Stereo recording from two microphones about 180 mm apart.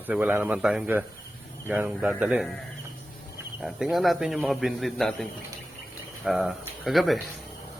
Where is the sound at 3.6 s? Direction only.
Centre (ahead or behind).